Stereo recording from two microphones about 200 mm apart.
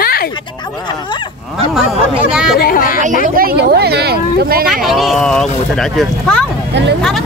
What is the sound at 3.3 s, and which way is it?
Speech, 50° right (ahead or behind).